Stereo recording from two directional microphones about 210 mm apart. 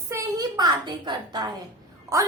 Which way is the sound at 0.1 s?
15° right (ahead or behind).